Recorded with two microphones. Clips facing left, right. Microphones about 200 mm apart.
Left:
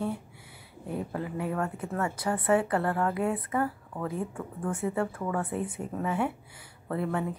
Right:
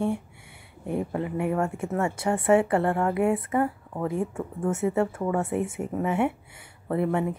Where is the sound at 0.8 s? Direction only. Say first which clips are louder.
Right 5 dB; 25° right (ahead or behind).